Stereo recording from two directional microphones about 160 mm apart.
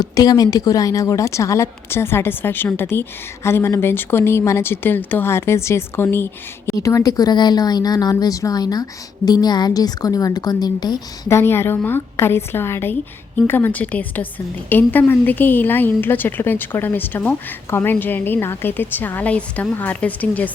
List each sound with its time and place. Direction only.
0.0 s speech: 25° left (ahead or behind)